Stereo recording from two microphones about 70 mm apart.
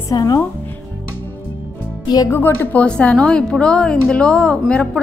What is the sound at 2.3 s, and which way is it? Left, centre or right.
A woman's voice, left.